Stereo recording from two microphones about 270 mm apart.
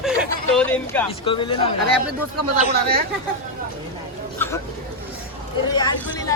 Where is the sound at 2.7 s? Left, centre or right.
Right.